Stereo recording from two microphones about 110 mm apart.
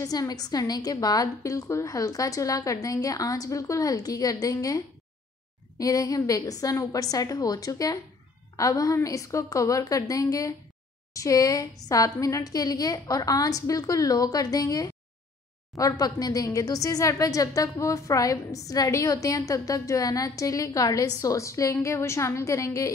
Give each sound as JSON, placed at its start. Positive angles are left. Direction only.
{"t": 0.0, "sound": "a woman's voice", "side_deg": 35}